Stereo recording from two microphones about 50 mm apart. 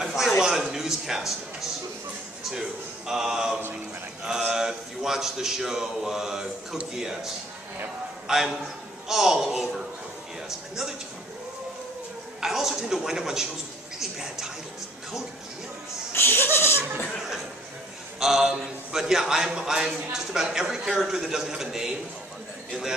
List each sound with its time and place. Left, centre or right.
0.0 s a sound: centre
3.1 s speech: centre
8.3 s speech: centre
12.4 s speech: centre
16.1 s speech: left
18.2 s speech: centre